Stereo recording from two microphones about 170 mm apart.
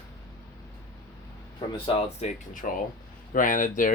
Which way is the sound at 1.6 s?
30° left (ahead or behind).